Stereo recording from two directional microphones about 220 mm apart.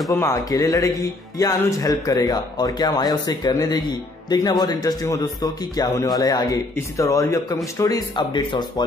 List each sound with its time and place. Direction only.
0.2 s a man's voice: 15° left (ahead or behind)